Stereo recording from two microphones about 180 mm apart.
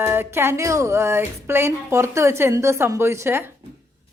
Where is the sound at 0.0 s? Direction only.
15° right (ahead or behind).